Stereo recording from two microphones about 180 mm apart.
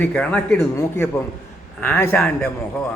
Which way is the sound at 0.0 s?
5° left (ahead or behind).